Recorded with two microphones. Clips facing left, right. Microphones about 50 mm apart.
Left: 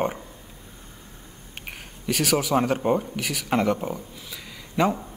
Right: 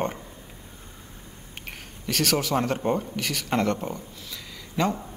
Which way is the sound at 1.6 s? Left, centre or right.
Centre.